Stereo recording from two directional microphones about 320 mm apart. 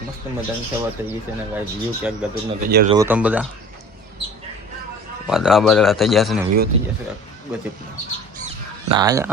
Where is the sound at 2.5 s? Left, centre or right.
Right.